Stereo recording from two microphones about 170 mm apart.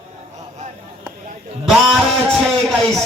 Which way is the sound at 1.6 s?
Centre (ahead or behind).